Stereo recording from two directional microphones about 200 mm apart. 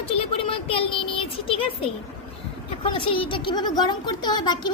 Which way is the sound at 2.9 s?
25° left (ahead or behind).